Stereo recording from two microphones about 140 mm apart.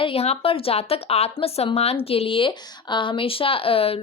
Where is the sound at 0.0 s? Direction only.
45° left (ahead or behind).